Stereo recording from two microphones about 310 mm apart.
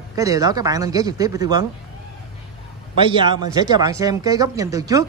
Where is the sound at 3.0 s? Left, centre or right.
Centre.